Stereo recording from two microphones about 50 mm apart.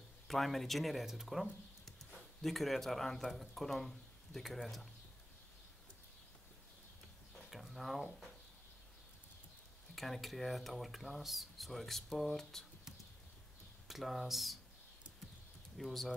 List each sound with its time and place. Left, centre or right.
0.3 s speech: centre
7.3 s speech: centre
9.9 s speech: centre
13.8 s speech: centre
15.8 s speech: centre